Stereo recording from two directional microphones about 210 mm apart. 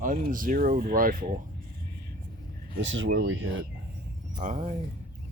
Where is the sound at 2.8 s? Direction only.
65° right (ahead or behind).